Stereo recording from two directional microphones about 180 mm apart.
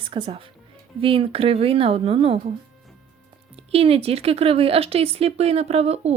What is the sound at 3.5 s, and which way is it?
Speech, 35° right (ahead or behind).